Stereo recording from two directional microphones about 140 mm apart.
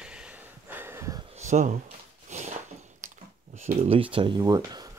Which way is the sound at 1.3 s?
55° right (ahead or behind).